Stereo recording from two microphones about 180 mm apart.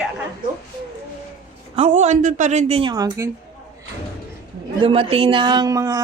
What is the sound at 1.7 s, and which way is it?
A woman's voice, 40° right (ahead or behind).